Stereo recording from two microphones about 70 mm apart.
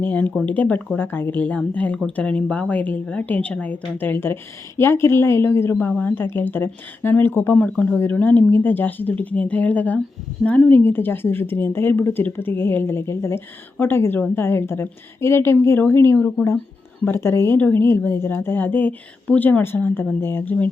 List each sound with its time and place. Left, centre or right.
0.0 s a woman's voice: left
6.0 s a woman's voice: left
7.7 s speech: centre
7.9 s a woman's voice: left
10.7 s a woman's voice: left
17.2 s a woman's voice: left